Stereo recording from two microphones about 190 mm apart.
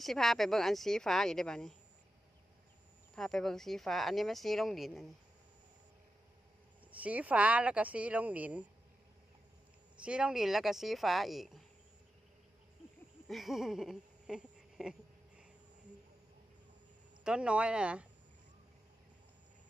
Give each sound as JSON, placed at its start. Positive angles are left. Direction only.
{"t": 0.0, "sound": "speech", "side_deg": 0}
{"t": 3.2, "sound": "speech", "side_deg": 0}
{"t": 7.0, "sound": "speech", "side_deg": -5}
{"t": 10.0, "sound": "speech", "side_deg": -5}
{"t": 13.3, "sound": "a sound", "side_deg": 0}
{"t": 17.2, "sound": "speech", "side_deg": -5}